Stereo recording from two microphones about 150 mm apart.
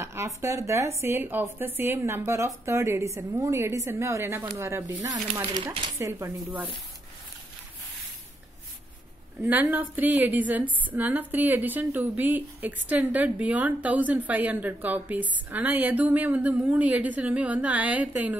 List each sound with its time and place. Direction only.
0.0 s a woman's voice: 20° right (ahead or behind)
9.4 s a woman's voice: 10° right (ahead or behind)